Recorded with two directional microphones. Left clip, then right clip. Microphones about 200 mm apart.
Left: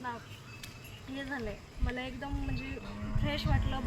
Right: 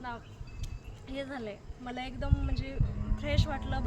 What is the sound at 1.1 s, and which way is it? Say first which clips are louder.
Speech: right 1 dB; 25° right (ahead or behind).